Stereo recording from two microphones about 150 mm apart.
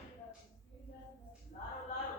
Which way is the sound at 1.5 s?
55° left (ahead or behind).